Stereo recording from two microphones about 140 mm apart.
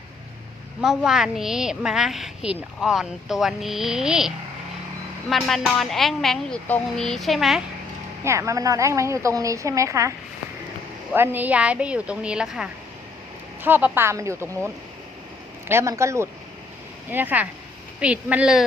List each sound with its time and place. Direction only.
0.8 s a woman's voice: 5° right (ahead or behind)
5.3 s a woman's voice: centre (ahead or behind)
8.2 s a woman's voice: 20° right (ahead or behind)
11.1 s a woman's voice: 15° right (ahead or behind)
15.7 s a woman's voice: 20° right (ahead or behind)